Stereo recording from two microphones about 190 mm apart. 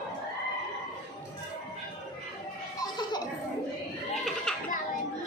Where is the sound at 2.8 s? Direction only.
20° left (ahead or behind).